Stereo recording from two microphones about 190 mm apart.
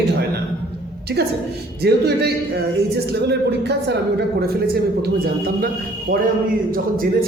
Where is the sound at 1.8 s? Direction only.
60° right (ahead or behind).